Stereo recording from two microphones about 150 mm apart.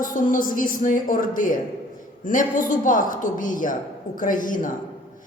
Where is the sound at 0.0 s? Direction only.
65° left (ahead or behind).